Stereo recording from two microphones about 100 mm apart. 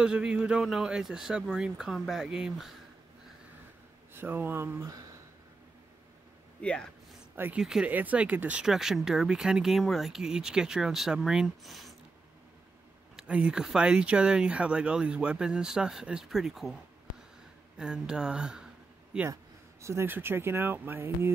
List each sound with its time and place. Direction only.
0.0 s speech: 10° right (ahead or behind)
4.1 s speech: 20° right (ahead or behind)
6.6 s speech: 10° left (ahead or behind)
7.3 s speech: 20° right (ahead or behind)
7.6 s speech: 5° right (ahead or behind)
13.1 s speech: 10° right (ahead or behind)
17.7 s speech: 10° right (ahead or behind)
19.8 s speech: 25° right (ahead or behind)